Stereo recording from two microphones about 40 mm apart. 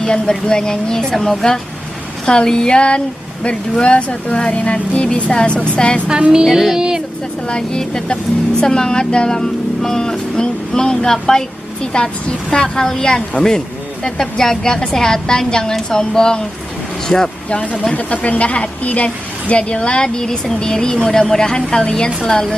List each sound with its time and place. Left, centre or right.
0.0 s a woman's voice: centre
1.1 s speech: centre
2.2 s speech: centre
6.0 s music: right
6.4 s music: centre
7.4 s a woman's voice: centre
11.9 s a woman's voice: left
17.9 s a woman's voice: left; by 22.6 s centre